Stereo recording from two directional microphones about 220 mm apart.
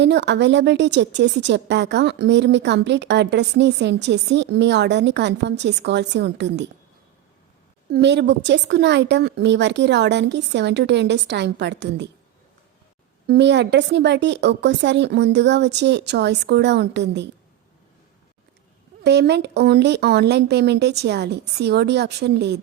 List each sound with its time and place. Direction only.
0.0 s a woman's voice: 50° right (ahead or behind)
7.9 s a woman's voice: 50° right (ahead or behind)
13.2 s a woman's voice: 50° right (ahead or behind)
19.0 s a woman's voice: 50° right (ahead or behind)